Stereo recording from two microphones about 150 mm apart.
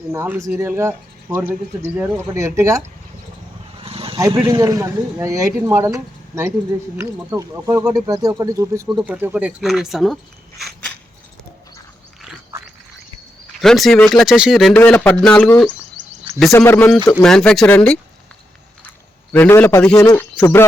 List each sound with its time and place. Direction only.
0.1 s a man's voice: 15° right (ahead or behind)
3.8 s vehicle: 40° right (ahead or behind)
4.4 s a man's voice: 25° right (ahead or behind)
8.9 s speech: 5° right (ahead or behind)
13.6 s speech: centre (ahead or behind)
14.8 s a man's voice: 10° left (ahead or behind)
16.5 s a man's voice: 20° left (ahead or behind)
17.2 s speech: 5° left (ahead or behind)
19.3 s a man's voice: 10° left (ahead or behind)